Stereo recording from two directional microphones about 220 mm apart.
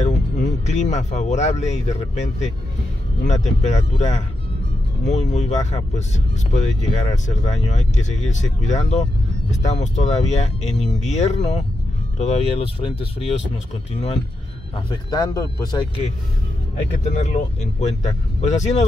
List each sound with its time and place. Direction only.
0.0 s speech: 30° left (ahead or behind)
17.0 s speech: 30° left (ahead or behind)